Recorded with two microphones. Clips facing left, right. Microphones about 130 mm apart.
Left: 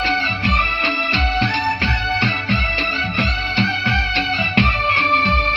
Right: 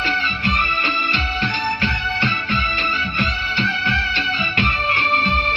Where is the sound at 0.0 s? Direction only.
90° left.